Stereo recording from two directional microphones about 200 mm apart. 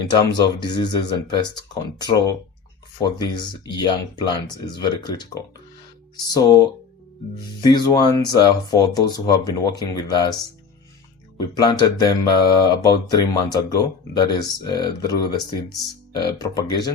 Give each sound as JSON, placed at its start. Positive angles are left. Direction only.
{"t": 0.1, "sound": "speech", "side_deg": 20}
{"t": 11.3, "sound": "speech", "side_deg": 20}